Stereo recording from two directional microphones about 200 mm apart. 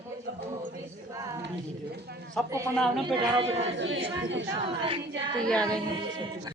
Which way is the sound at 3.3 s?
30° right (ahead or behind).